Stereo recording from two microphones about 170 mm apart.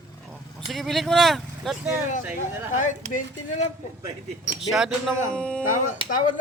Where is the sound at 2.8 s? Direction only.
50° left (ahead or behind).